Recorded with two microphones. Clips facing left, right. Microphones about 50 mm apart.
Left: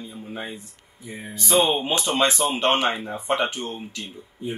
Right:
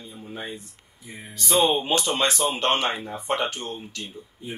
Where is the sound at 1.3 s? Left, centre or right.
Left.